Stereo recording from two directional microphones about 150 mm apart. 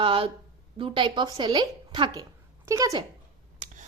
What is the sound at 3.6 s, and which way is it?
Finger snapping, 55° right (ahead or behind).